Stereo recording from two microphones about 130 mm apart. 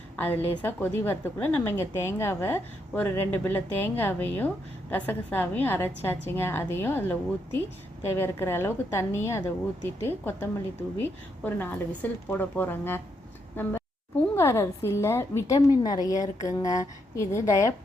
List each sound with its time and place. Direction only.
0.2 s a woman's voice: 15° left (ahead or behind)